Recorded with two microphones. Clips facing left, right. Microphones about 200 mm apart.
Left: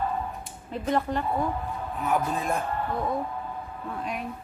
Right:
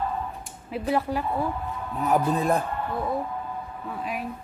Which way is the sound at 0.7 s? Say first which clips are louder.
Right 1 dB; 5° right (ahead or behind).